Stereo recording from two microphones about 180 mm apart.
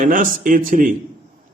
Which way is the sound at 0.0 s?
50° right (ahead or behind).